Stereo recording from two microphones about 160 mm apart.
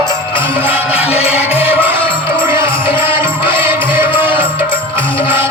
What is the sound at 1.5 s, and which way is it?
Music, 10° right (ahead or behind).